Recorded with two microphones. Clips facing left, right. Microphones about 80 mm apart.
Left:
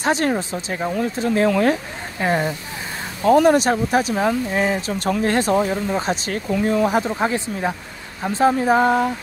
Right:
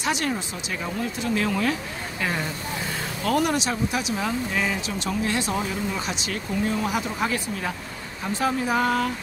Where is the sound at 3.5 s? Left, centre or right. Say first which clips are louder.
Left 9 dB; left.